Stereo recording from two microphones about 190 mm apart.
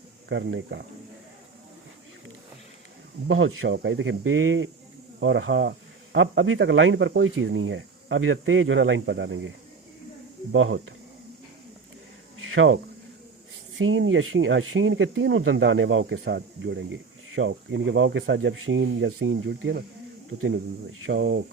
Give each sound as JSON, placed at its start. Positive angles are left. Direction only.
{"t": 0.3, "sound": "speech", "side_deg": -75}
{"t": 3.2, "sound": "speech", "side_deg": -90}
{"t": 10.5, "sound": "speech", "side_deg": -90}
{"t": 12.4, "sound": "a sound", "side_deg": -90}
{"t": 13.7, "sound": "speech", "side_deg": -90}
{"t": 21.1, "sound": "speech", "side_deg": -65}